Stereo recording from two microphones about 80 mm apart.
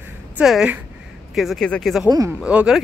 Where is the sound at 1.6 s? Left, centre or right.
Centre.